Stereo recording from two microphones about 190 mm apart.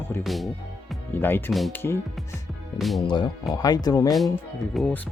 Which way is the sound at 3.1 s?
25° left (ahead or behind).